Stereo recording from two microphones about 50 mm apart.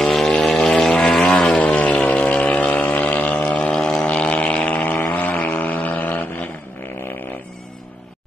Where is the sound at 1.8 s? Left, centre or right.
Left.